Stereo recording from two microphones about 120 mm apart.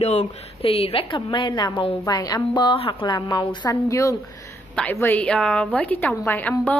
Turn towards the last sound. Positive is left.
turn(degrees=15)  # may be behind; listen again after turning